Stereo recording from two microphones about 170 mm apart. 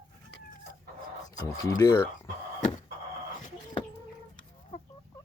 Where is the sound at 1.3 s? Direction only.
20° left (ahead or behind).